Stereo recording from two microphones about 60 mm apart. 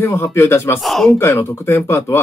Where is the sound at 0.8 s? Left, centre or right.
Centre.